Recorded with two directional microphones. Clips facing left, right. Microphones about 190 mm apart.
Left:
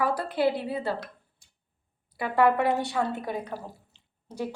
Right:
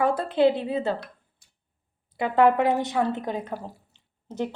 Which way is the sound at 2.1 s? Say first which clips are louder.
Right 3 dB; 20° right (ahead or behind).